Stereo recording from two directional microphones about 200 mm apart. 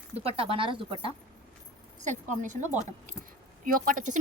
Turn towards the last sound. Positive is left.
turn(degrees=-40)  # may be behind; listen again after turning